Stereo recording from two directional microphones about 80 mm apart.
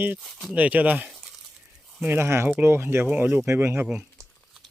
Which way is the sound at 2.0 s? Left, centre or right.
Right.